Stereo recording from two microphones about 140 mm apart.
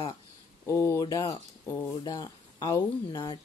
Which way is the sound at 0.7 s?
20° left (ahead or behind).